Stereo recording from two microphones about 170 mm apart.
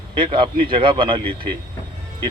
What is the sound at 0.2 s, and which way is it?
Speech, 30° right (ahead or behind).